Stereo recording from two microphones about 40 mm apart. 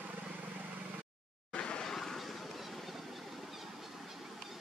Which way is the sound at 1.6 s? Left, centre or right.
Left.